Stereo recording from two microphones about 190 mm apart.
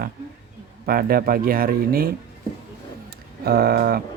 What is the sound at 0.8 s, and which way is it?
Speech, 50° right (ahead or behind).